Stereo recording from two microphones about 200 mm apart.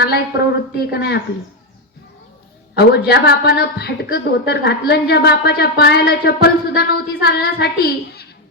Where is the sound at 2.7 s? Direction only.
55° left (ahead or behind).